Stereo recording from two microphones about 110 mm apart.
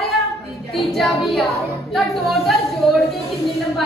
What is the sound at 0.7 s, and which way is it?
A woman's voice, centre (ahead or behind).